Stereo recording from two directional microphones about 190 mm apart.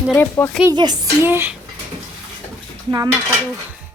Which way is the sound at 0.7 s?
20° right (ahead or behind).